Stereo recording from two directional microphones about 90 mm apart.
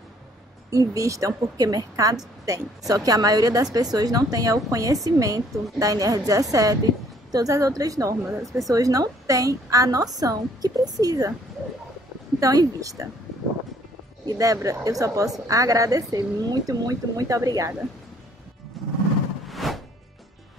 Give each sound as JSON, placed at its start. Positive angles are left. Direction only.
{"t": 0.7, "sound": "a woman's voice", "side_deg": -35}
{"t": 12.4, "sound": "a woman's voice", "side_deg": -40}
{"t": 14.2, "sound": "a woman's voice", "side_deg": -40}
{"t": 18.8, "sound": "music", "side_deg": 0}